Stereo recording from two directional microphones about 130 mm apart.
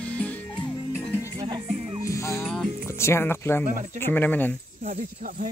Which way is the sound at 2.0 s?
25° left (ahead or behind).